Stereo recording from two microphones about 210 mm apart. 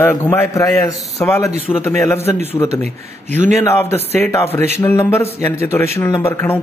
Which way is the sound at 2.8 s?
35° right (ahead or behind).